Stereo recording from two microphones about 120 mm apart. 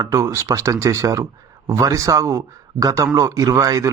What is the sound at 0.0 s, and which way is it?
Speech, 25° right (ahead or behind).